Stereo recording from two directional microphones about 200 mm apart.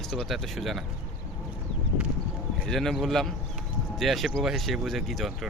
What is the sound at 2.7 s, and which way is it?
Speech, centre (ahead or behind).